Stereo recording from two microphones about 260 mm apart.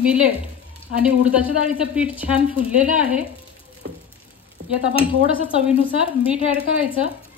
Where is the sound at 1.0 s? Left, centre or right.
Centre.